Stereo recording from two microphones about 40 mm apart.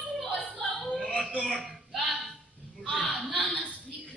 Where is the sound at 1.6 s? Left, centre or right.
Centre.